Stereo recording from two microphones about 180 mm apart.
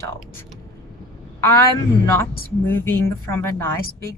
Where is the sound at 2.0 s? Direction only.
15° left (ahead or behind).